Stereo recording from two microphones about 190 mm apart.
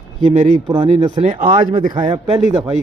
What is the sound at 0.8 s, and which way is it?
Speech, 30° right (ahead or behind).